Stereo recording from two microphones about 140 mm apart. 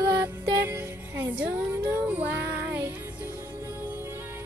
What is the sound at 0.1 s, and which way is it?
Music, 15° right (ahead or behind).